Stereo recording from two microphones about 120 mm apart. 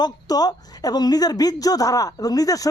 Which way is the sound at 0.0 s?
35° left (ahead or behind).